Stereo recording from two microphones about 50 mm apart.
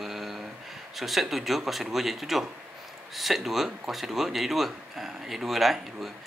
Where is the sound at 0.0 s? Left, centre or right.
Centre.